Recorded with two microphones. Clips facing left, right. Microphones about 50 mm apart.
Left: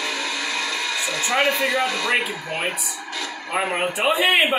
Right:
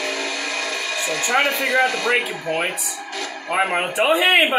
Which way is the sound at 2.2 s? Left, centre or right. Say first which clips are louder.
Right 3 dB; right.